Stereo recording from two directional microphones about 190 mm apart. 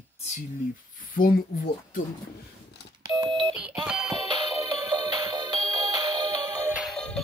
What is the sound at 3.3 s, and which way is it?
Alarm clock, 25° right (ahead or behind).